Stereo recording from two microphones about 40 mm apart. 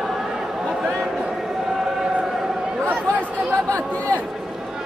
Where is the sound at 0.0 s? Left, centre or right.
Centre.